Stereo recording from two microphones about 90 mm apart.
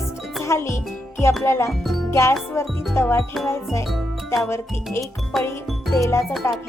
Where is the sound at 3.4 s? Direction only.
30° left (ahead or behind).